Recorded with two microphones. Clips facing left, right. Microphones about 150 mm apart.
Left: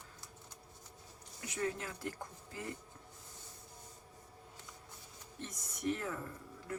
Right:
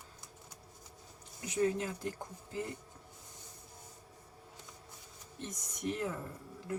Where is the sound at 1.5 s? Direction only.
20° right (ahead or behind).